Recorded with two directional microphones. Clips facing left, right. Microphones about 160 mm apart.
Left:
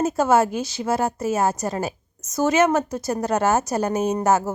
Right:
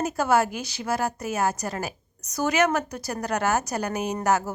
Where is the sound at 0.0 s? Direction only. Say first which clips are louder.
Left 4 dB; 25° left (ahead or behind).